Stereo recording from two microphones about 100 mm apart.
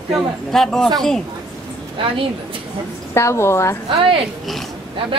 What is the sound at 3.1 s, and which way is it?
Speech, 25° left (ahead or behind).